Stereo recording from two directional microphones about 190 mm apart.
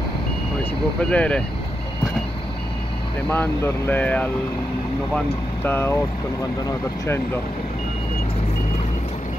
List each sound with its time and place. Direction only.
1.1 s speech: 5° left (ahead or behind)
3.3 s speech: 10° left (ahead or behind)